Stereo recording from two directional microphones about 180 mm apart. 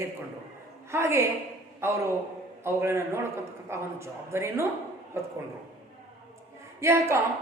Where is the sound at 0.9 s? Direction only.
15° right (ahead or behind).